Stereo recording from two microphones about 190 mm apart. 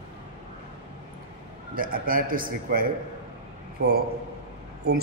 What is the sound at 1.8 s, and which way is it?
A man's voice, 50° right (ahead or behind).